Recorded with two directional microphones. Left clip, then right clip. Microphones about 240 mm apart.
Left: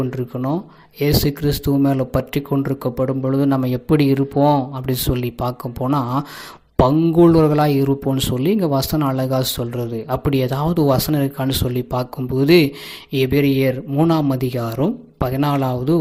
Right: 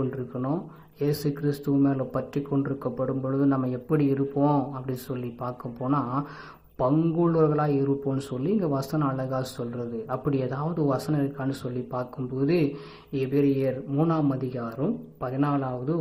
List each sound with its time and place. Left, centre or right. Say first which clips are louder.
0.1 s speech: left 7 dB; left